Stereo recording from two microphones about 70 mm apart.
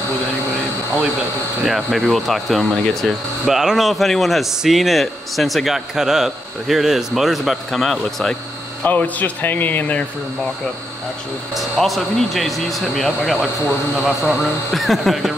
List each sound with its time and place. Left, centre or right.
1.6 s speech: centre
3.4 s speech: centre
8.8 s speech: left
11.5 s speech: centre